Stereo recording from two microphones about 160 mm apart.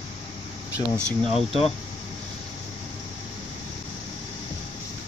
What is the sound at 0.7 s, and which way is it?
Speech, 15° right (ahead or behind).